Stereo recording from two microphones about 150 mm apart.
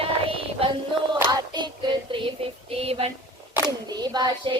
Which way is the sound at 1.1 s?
25° right (ahead or behind).